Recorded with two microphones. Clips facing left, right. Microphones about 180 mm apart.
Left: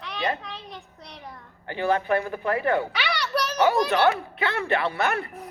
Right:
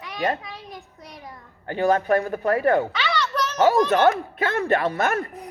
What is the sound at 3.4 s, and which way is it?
Children playing, 10° left (ahead or behind).